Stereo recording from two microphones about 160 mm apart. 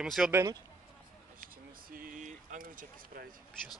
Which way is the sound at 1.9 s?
60° right (ahead or behind).